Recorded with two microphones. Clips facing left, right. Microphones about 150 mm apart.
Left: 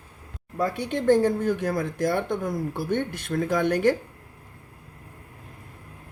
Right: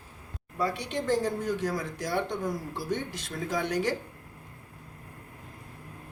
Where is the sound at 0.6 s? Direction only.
55° left (ahead or behind).